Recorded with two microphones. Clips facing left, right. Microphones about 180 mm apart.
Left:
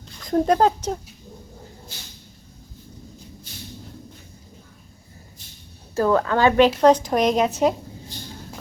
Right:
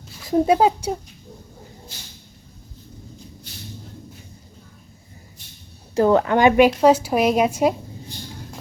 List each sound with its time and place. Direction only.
0.2 s speech: 5° right (ahead or behind)
5.9 s a woman's voice: 20° right (ahead or behind)